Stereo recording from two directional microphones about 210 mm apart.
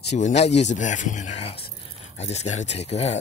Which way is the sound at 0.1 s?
35° left (ahead or behind).